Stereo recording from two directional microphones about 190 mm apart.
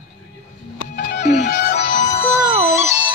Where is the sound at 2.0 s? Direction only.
35° left (ahead or behind).